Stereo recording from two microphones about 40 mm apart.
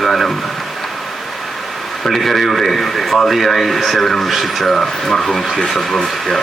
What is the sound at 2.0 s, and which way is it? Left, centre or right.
Speech, centre.